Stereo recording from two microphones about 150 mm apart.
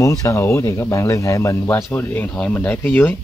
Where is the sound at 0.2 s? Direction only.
20° left (ahead or behind).